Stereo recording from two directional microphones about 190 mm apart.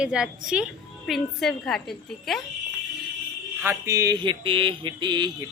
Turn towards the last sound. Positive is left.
turn(degrees=-25)  # may be behind; listen again after turning